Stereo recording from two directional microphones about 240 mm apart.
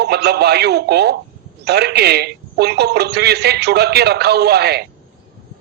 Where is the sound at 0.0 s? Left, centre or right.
Right.